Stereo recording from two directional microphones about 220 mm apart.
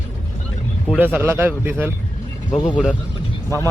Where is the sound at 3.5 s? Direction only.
15° right (ahead or behind).